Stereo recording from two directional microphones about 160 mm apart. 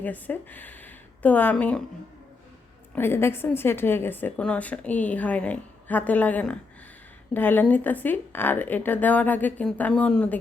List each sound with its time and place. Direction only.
0.0 s speech: 10° left (ahead or behind)
2.9 s a woman's voice: 15° left (ahead or behind)